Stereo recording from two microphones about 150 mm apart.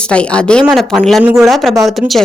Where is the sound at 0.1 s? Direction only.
5° left (ahead or behind).